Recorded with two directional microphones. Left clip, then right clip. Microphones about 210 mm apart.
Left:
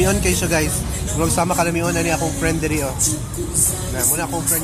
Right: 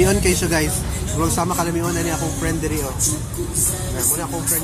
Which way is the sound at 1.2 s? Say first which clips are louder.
Left 2 dB; 25° left (ahead or behind).